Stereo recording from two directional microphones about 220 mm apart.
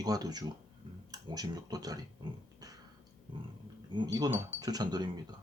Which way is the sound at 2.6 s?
15° right (ahead or behind).